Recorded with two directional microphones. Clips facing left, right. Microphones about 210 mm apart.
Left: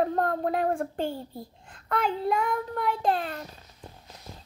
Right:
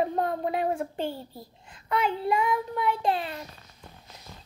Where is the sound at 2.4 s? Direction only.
45° left (ahead or behind).